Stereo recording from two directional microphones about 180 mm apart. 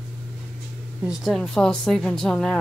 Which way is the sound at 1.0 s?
Centre (ahead or behind).